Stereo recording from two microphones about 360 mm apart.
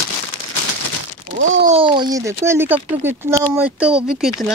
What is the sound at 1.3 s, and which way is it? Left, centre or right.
Speech, right.